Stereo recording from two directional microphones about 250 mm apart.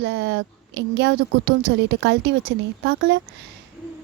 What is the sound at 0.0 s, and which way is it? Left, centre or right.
Speech, right.